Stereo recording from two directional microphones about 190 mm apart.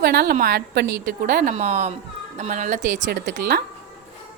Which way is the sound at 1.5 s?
35° right (ahead or behind).